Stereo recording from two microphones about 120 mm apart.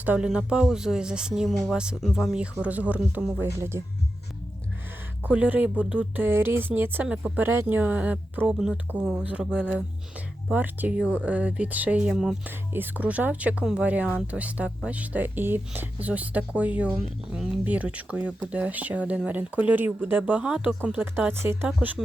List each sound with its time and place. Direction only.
0.0 s speech: 10° right (ahead or behind)
5.2 s speech: 15° right (ahead or behind)
12.5 s speech: 15° right (ahead or behind)
21.7 s speech: 5° right (ahead or behind)